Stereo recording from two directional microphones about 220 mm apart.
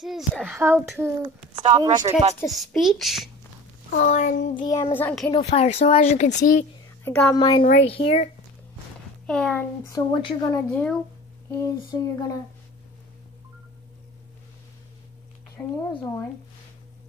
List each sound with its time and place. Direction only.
0.0 s speech: centre (ahead or behind)
0.6 s a child's voice: 10° right (ahead or behind)
1.5 s speech: 20° right (ahead or behind)
2.4 s speech: centre (ahead or behind)
3.9 s speech: 35° left (ahead or behind)
4.6 s speech: 15° left (ahead or behind)
5.3 s speech: 30° left (ahead or behind)
7.1 s speech: 10° left (ahead or behind)
7.6 s speech: 30° left (ahead or behind)
9.2 s speech: 5° left (ahead or behind)
10.1 s speech: 25° left (ahead or behind)
10.7 s speech: 5° left (ahead or behind)
15.5 s speech: 15° left (ahead or behind)